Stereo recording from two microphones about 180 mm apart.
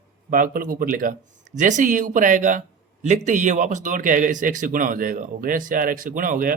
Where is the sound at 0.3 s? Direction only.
50° right (ahead or behind).